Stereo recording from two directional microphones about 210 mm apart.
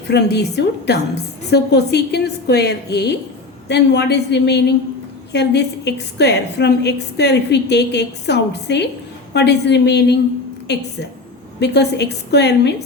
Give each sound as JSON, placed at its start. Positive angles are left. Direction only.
{"t": 0.1, "sound": "a woman's voice", "side_deg": 50}